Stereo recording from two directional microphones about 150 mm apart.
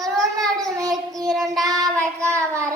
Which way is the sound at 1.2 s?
Centre (ahead or behind).